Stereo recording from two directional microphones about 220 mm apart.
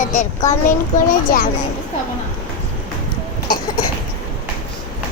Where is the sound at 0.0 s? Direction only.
35° left (ahead or behind).